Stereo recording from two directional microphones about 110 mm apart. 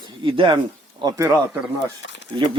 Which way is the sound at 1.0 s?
30° right (ahead or behind).